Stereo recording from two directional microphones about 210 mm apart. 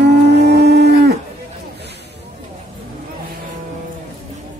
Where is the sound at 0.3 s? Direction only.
55° right (ahead or behind).